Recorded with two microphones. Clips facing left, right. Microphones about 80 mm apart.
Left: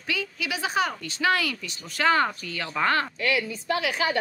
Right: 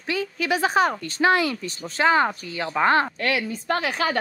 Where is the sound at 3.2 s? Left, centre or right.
Right.